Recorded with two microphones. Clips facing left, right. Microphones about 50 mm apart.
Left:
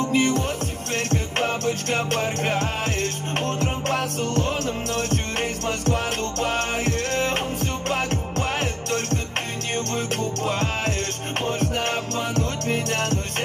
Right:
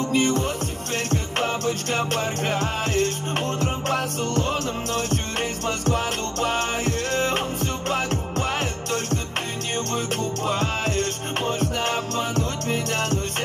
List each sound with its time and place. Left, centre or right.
0.1 s music: left
1.6 s music: left
5.9 s music: left